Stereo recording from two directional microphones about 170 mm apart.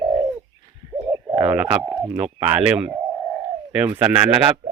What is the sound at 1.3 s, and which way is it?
Speech, 10° right (ahead or behind).